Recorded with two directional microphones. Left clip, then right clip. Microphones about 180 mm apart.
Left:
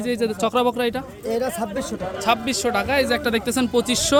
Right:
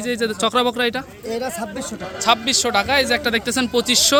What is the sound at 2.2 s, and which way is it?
Speech, centre (ahead or behind).